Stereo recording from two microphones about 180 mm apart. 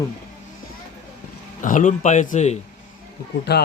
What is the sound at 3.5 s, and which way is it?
Speech, 65° left (ahead or behind).